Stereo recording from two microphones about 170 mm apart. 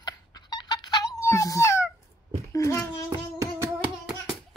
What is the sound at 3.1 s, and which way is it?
Music, 15° right (ahead or behind).